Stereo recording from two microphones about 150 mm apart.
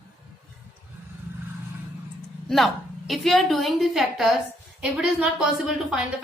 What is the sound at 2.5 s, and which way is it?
Speech, centre (ahead or behind).